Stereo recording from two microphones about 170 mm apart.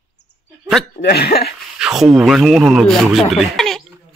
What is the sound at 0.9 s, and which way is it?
Speech, 65° left (ahead or behind).